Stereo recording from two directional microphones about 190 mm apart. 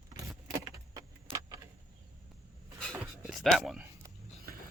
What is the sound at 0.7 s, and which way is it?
Keys jangling, 15° right (ahead or behind).